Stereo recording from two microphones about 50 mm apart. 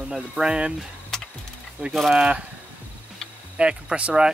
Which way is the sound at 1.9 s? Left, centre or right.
Centre.